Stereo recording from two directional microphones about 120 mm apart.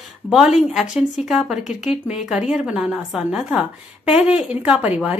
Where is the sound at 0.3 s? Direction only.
5° right (ahead or behind).